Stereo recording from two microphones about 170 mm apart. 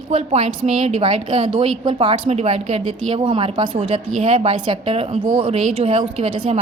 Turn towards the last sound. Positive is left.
turn(degrees=-35)  # may be behind; listen again after turning